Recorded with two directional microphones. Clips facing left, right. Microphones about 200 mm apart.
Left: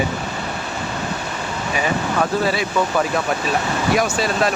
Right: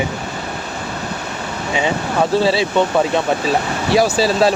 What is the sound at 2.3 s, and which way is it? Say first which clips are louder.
Speech: right 4 dB; 30° right (ahead or behind).